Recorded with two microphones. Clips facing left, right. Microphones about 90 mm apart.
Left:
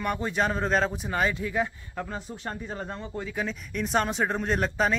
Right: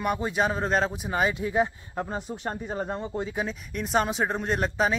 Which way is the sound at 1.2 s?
20° right (ahead or behind).